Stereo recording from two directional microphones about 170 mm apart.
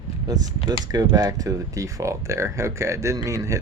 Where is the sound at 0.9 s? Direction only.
20° right (ahead or behind).